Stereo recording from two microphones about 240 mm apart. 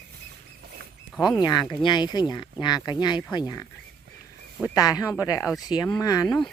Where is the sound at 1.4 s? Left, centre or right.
Centre.